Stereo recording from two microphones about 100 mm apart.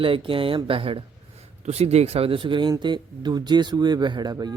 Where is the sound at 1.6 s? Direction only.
90° right.